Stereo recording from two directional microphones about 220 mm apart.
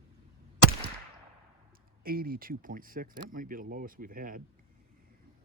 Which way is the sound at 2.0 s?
40° right (ahead or behind).